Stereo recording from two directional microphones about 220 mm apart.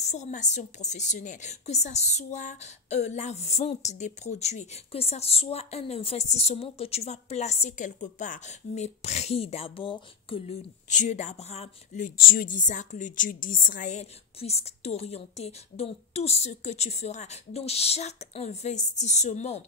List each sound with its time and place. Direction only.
0.0 s a woman's voice: 30° left (ahead or behind)